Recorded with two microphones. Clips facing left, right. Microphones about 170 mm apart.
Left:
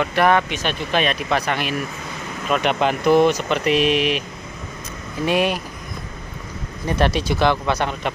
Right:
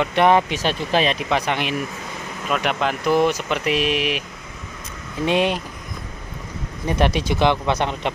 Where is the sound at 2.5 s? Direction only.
5° right (ahead or behind).